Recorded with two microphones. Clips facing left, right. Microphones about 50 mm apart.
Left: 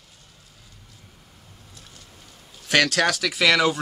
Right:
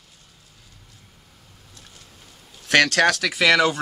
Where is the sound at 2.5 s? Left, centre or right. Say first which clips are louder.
Right 3 dB; centre.